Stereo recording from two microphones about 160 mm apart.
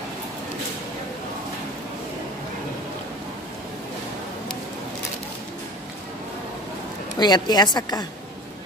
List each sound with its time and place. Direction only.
7.2 s a woman's voice: 25° left (ahead or behind)